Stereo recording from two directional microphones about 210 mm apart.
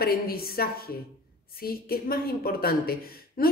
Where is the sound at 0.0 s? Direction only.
45° left (ahead or behind).